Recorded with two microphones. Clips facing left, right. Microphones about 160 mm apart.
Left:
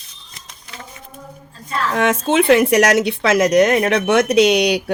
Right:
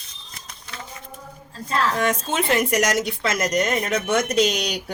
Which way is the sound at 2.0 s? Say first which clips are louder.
Left 7 dB; 80° left.